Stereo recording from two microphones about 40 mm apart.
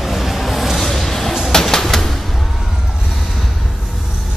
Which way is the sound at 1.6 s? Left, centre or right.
Centre.